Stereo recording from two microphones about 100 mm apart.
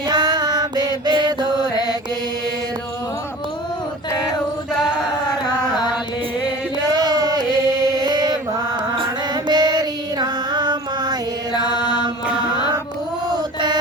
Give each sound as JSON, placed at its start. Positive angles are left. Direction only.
{"t": 0.1, "sound": "music", "side_deg": -45}
{"t": 4.8, "sound": "chant", "side_deg": -5}
{"t": 6.9, "sound": "a sound", "side_deg": -45}
{"t": 9.3, "sound": "music", "side_deg": -45}
{"t": 11.7, "sound": "mantra", "side_deg": 50}